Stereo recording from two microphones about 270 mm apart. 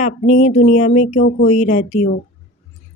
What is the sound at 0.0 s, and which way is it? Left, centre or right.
Speech, left.